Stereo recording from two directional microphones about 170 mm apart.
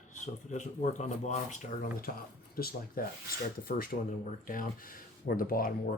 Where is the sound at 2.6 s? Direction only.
60° left (ahead or behind).